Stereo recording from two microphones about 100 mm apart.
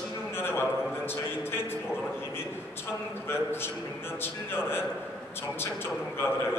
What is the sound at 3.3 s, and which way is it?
Speech, 25° left (ahead or behind).